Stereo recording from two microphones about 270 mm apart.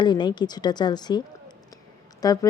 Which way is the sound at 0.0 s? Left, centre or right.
Centre.